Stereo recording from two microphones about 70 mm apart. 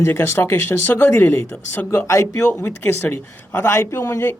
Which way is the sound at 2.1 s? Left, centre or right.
Left.